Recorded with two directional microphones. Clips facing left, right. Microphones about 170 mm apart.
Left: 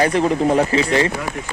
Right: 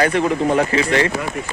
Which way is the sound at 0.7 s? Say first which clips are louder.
Even; 30° left (ahead or behind).